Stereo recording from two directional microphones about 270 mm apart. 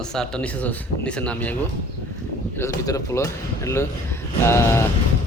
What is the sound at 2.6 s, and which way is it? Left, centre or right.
Speech, centre.